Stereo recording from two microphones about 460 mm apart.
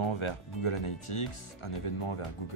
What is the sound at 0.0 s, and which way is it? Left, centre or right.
Speech, left.